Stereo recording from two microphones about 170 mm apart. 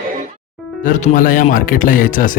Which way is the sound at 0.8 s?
50° left (ahead or behind).